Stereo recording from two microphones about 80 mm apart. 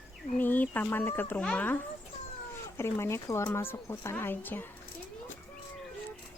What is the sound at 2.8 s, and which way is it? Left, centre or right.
Speech, left.